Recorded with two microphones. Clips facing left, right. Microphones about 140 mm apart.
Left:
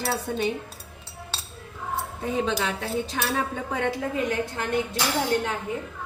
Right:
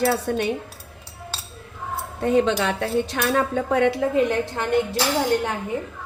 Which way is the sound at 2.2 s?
70° right (ahead or behind).